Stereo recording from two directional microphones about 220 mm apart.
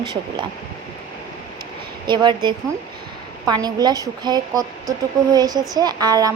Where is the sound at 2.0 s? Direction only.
20° right (ahead or behind).